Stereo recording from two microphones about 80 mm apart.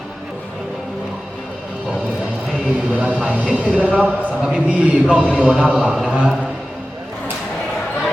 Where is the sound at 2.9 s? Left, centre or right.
Centre.